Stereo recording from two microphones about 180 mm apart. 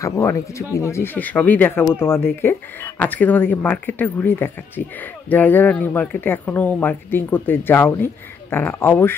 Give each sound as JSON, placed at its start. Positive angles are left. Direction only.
{"t": 0.0, "sound": "speech", "side_deg": 15}